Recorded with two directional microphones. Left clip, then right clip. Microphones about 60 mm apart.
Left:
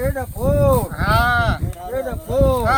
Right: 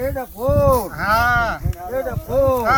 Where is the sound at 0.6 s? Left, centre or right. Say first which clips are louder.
Right 1 dB; left.